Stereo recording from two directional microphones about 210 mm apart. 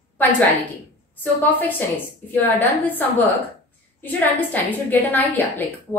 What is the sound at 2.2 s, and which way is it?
A woman's voice, 10° left (ahead or behind).